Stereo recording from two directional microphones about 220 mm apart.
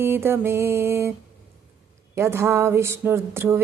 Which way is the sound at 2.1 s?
10° right (ahead or behind).